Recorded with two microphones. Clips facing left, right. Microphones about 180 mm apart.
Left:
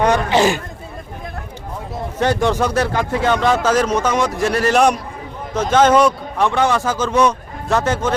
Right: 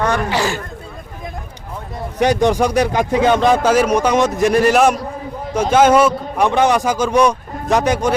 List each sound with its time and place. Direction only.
0.0 s speech: 20° left (ahead or behind)
2.1 s speech: 15° right (ahead or behind)
4.7 s a man's voice: 5° right (ahead or behind)
6.4 s speech: 15° right (ahead or behind)